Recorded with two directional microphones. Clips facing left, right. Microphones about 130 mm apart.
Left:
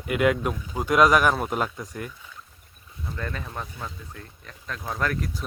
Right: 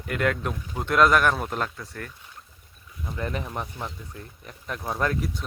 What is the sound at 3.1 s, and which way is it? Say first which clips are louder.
Speech: right 3 dB; 20° right (ahead or behind).